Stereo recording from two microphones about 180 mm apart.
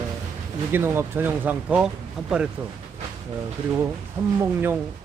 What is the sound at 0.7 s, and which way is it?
Speech, 15° right (ahead or behind).